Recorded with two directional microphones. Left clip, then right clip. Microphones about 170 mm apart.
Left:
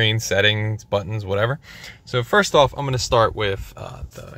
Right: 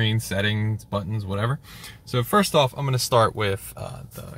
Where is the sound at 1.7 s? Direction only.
20° left (ahead or behind); by 4.3 s centre (ahead or behind).